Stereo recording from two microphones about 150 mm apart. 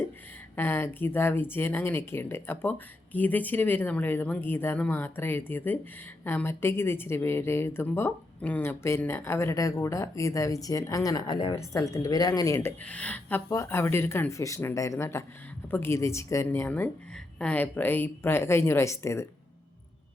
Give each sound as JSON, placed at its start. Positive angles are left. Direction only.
{"t": 0.5, "sound": "a woman's voice", "side_deg": 15}
{"t": 12.5, "sound": "a woman's voice", "side_deg": 10}